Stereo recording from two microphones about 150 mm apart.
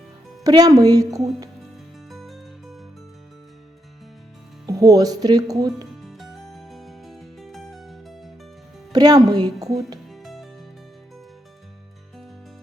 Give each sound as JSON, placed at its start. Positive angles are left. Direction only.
{"t": 0.4, "sound": "speech", "side_deg": -25}
{"t": 2.0, "sound": "music", "side_deg": 0}
{"t": 4.6, "sound": "speech", "side_deg": -20}
{"t": 6.0, "sound": "music", "side_deg": 0}
{"t": 8.9, "sound": "speech", "side_deg": -25}
{"t": 10.1, "sound": "music", "side_deg": 0}